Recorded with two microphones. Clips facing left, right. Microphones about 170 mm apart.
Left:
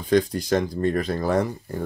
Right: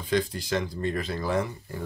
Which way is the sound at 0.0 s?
45° left (ahead or behind).